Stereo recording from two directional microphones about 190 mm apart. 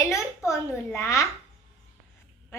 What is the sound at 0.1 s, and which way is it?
A child's voice, 15° left (ahead or behind).